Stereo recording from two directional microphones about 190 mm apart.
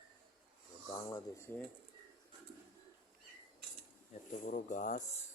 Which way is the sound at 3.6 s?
60° right (ahead or behind).